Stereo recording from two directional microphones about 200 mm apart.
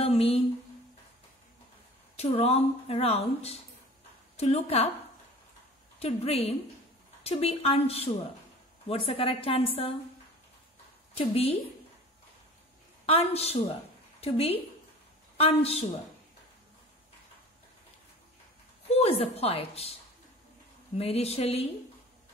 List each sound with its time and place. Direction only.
0.0 s a sound: 30° left (ahead or behind)
2.1 s a woman's voice: 30° left (ahead or behind)
5.9 s a woman's voice: 30° left (ahead or behind)
11.1 s a woman's voice: 30° left (ahead or behind)
13.0 s a woman's voice: 30° left (ahead or behind)
18.9 s a woman's voice: 30° left (ahead or behind)
21.0 s a woman's voice: 30° left (ahead or behind)